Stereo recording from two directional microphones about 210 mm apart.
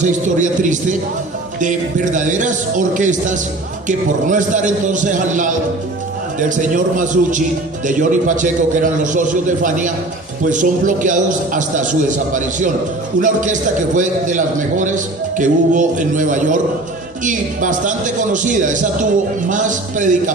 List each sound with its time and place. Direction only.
0.0 s a man's voice: 35° right (ahead or behind)
2.1 s a man's voice: 35° right (ahead or behind)